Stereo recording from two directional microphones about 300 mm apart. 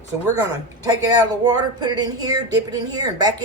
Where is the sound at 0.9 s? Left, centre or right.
Centre.